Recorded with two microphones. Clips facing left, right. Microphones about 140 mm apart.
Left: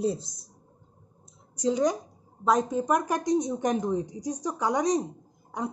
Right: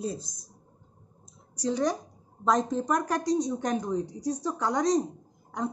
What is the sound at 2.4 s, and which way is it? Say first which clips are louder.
Speech: left 1 dB; 5° left (ahead or behind).